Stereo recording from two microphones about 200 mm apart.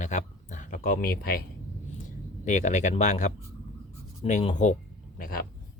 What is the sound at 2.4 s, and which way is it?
Speech, 35° left (ahead or behind).